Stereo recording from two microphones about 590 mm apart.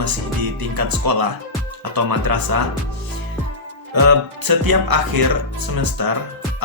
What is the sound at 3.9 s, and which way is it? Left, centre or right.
Speech, right.